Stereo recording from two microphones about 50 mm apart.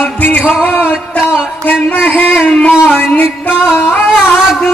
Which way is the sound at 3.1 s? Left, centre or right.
Left.